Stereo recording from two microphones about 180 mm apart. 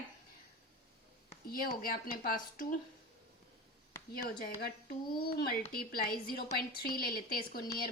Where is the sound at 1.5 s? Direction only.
55° left (ahead or behind).